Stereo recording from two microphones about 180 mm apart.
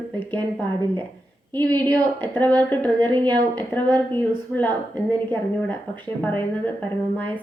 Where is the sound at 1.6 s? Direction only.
10° left (ahead or behind).